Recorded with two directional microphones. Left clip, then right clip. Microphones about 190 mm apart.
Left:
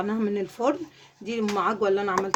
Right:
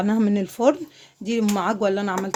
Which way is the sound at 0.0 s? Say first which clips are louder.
Right 4 dB; 65° right (ahead or behind).